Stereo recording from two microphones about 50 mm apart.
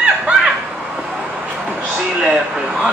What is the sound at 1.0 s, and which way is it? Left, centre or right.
Vehicle, right.